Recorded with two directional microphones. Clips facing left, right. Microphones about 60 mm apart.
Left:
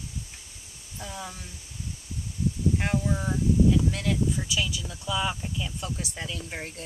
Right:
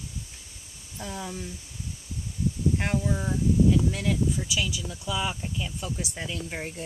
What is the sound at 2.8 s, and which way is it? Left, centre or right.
Speech, centre.